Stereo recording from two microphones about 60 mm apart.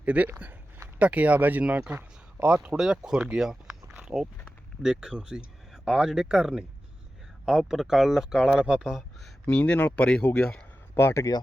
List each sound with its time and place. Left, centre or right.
0.0 s speech: right
2.7 s speech: centre
9.5 s speech: centre
9.7 s speech: left
10.0 s speech: centre
10.9 s speech: left